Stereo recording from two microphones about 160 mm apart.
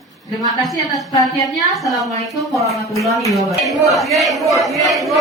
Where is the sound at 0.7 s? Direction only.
Centre (ahead or behind).